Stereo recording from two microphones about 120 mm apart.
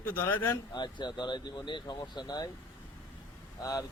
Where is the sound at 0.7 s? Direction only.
40° left (ahead or behind).